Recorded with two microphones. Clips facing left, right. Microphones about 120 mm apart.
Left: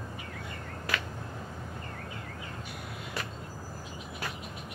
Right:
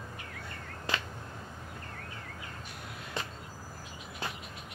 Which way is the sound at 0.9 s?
25° right (ahead or behind).